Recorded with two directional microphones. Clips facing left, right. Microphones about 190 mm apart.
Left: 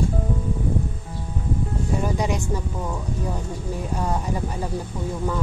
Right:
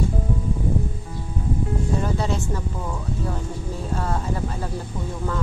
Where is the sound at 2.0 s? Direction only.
15° left (ahead or behind).